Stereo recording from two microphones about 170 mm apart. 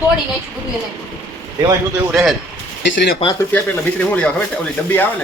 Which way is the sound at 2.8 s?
90° left.